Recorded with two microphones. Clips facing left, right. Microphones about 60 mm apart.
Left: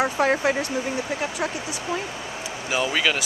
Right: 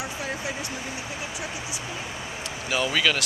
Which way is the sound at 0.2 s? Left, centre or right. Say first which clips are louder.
Left 12 dB; left.